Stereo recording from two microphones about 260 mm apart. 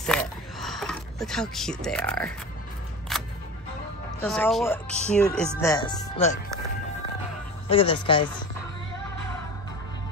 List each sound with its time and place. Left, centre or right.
0.0 s a sound: centre
3.1 s music: centre
4.2 s speech: centre
5.6 s speech: centre
7.7 s speech: centre